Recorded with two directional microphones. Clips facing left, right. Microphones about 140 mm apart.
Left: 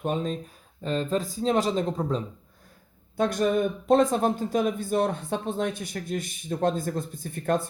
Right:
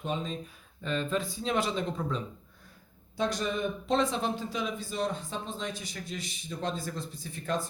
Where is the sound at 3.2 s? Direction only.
50° left (ahead or behind).